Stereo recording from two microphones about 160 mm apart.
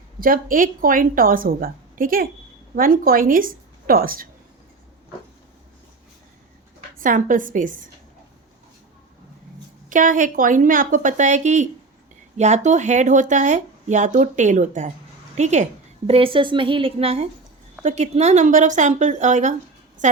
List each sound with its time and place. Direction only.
0.2 s a woman's voice: 60° right (ahead or behind)
7.0 s a woman's voice: 55° right (ahead or behind)
9.9 s a woman's voice: 55° right (ahead or behind)
16.0 s a woman's voice: 35° right (ahead or behind)